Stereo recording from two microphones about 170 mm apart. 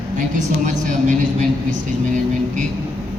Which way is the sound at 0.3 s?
45° right (ahead or behind).